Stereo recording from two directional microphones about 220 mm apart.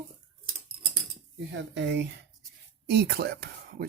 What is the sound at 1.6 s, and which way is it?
Speech, 55° right (ahead or behind).